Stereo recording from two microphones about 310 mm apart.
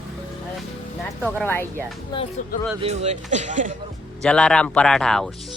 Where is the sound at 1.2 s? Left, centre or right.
Centre.